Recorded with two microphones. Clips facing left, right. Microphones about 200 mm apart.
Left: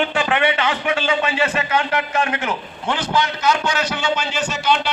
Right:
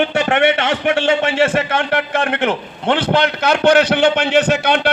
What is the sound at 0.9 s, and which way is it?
Speech, 75° right (ahead or behind).